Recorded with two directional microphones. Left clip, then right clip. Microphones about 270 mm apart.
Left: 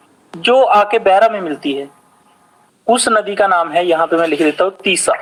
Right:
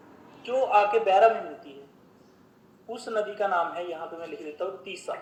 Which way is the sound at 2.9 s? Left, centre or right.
Left.